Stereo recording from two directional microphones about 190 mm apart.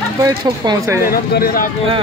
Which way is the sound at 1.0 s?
50° left (ahead or behind).